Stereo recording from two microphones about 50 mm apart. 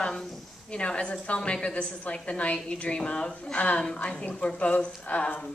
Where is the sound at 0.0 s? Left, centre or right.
Centre.